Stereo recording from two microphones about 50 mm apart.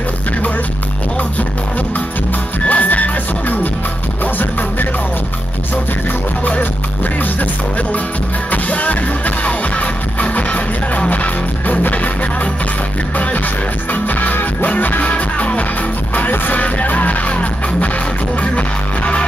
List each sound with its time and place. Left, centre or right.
2.6 s music: left
8.5 s music: left
13.9 s music: left